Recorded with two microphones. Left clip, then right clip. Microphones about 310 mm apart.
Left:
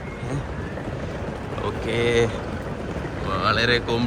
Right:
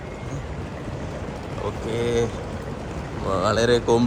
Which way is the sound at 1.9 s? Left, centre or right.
Right.